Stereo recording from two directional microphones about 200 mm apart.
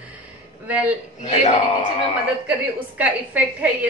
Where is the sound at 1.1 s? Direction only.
35° left (ahead or behind).